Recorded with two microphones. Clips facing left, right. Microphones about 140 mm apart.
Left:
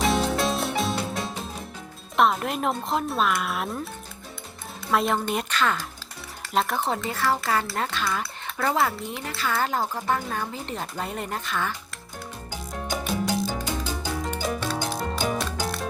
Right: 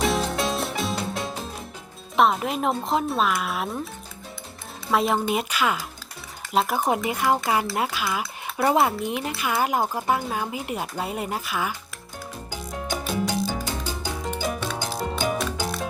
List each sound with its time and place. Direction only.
0.0 s music: centre (ahead or behind)
2.1 s speech: centre (ahead or behind)
4.9 s speech: centre (ahead or behind)
6.7 s speech: 15° right (ahead or behind)
7.7 s speech: 5° right (ahead or behind)
8.2 s speech: 20° right (ahead or behind)
12.5 s music: centre (ahead or behind)